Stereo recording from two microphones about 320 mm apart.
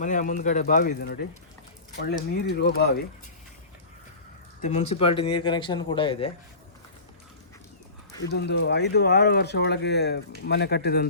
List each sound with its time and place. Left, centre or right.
0.0 s speech: left
4.6 s speech: centre
8.2 s speech: left